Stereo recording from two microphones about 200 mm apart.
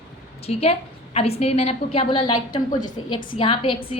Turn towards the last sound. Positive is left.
turn(degrees=25)  # may be behind; listen again after turning